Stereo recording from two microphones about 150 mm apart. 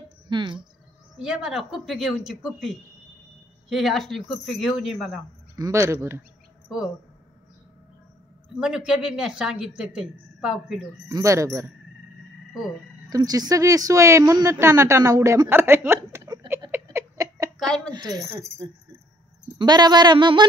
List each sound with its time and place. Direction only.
0.3 s speech: 30° right (ahead or behind)
1.1 s speech: 5° right (ahead or behind)
5.6 s speech: 20° right (ahead or behind)
8.5 s speech: 5° right (ahead or behind)
11.1 s speech: 20° right (ahead or behind)
13.1 s speech: 25° right (ahead or behind)
16.8 s a sound: 25° right (ahead or behind)
17.6 s a woman's voice: 5° left (ahead or behind)
17.9 s speech: 25° right (ahead or behind)
19.6 s speech: 30° right (ahead or behind)